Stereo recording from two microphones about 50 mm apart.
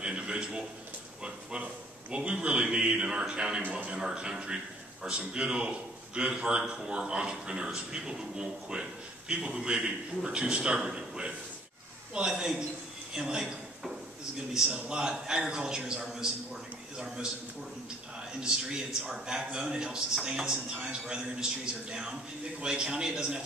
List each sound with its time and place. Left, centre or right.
0.0 s a sound: centre
1.6 s a man's voice: right
13.1 s a sound: centre
14.5 s a man's voice: centre
18.4 s a man's voice: centre
22.6 s a man's voice: centre